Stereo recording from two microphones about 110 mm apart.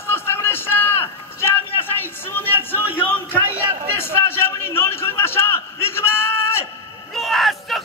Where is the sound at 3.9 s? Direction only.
20° left (ahead or behind).